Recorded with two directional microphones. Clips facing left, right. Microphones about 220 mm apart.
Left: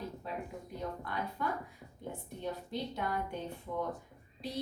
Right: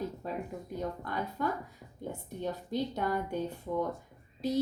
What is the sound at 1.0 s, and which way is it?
A woman's voice, 40° right (ahead or behind).